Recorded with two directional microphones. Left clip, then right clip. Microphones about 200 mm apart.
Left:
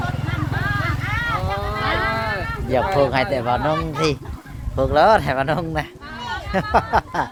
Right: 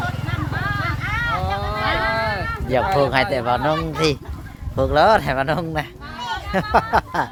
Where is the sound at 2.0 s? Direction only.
45° right (ahead or behind).